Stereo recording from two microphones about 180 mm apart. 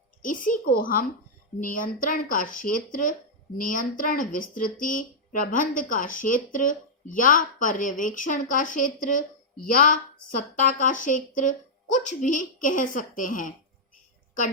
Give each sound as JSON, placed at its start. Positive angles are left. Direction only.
{"t": 0.2, "sound": "a child's voice", "side_deg": 45}